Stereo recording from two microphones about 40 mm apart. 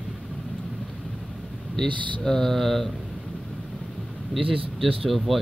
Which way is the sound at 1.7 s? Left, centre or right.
Centre.